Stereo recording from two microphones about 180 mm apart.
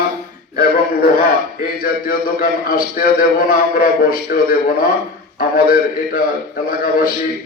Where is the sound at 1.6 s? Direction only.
55° left (ahead or behind).